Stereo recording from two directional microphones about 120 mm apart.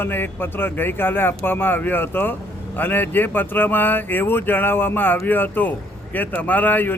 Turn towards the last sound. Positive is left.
turn(degrees=15)  # may be behind; listen again after turning